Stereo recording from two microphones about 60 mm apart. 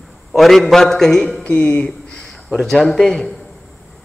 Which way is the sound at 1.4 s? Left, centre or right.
Left.